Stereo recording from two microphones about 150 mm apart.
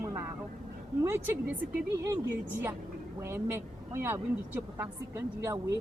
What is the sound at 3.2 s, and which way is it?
Speech, 15° right (ahead or behind).